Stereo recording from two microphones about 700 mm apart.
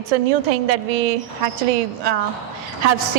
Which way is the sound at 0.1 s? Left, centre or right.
Right.